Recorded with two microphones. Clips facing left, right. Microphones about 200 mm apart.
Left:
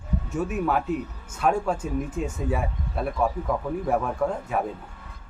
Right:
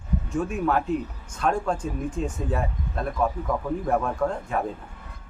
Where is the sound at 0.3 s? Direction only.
5° left (ahead or behind).